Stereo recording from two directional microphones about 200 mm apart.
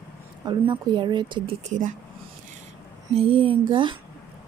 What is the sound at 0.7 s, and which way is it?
Speech, 20° right (ahead or behind).